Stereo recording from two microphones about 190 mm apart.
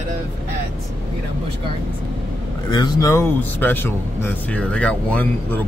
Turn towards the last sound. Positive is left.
turn(degrees=10)  # may be behind; listen again after turning